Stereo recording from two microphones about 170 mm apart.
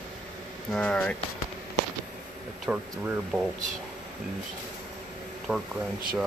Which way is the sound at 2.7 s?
10° right (ahead or behind).